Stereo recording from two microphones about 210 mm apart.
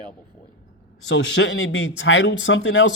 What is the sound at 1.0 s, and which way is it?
Speech, 60° left (ahead or behind).